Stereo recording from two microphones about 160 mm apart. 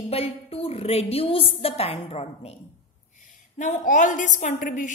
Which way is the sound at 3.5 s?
50° left (ahead or behind).